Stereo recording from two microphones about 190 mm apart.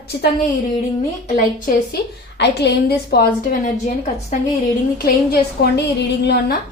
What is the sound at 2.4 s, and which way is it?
A woman's voice, 60° left (ahead or behind).